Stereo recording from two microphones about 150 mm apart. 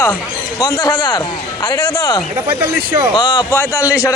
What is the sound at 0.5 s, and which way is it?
Speech, 20° left (ahead or behind).